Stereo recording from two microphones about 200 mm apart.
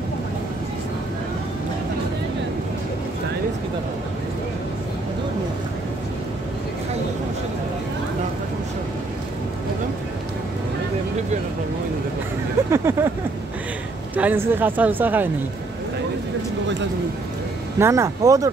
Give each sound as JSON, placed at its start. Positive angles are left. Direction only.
{"t": 12.7, "sound": "vehicle", "side_deg": -10}
{"t": 14.1, "sound": "speech", "side_deg": -10}
{"t": 17.7, "sound": "speech", "side_deg": -15}